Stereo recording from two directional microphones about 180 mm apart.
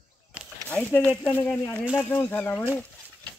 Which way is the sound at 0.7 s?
5° left (ahead or behind).